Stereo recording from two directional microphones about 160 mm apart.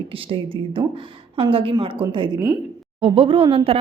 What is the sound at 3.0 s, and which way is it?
Speech, 35° right (ahead or behind).